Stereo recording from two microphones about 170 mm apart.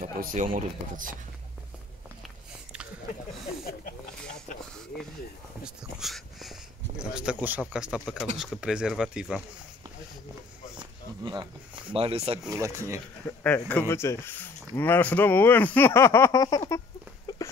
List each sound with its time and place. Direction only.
0.0 s speech: 55° right (ahead or behind)
2.2 s biting: 5° right (ahead or behind)
5.6 s speech: centre (ahead or behind)
10.8 s speech: 25° right (ahead or behind)
12.4 s speech: 20° right (ahead or behind)
13.4 s speech: 10° left (ahead or behind)
17.3 s a sound: 25° left (ahead or behind)